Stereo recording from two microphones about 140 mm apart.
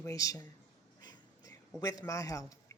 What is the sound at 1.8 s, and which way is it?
Speech, 25° left (ahead or behind).